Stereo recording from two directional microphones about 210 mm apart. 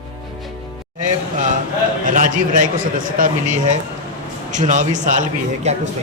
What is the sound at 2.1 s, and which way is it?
A man's voice, 40° right (ahead or behind).